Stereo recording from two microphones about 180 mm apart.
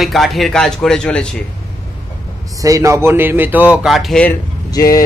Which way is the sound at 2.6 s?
20° right (ahead or behind).